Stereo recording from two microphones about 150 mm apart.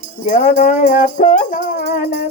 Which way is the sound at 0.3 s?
55° left (ahead or behind).